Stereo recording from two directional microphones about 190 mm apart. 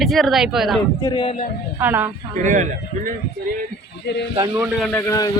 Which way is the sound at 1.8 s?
10° right (ahead or behind).